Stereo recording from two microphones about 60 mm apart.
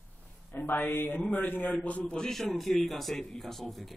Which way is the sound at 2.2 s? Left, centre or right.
Centre.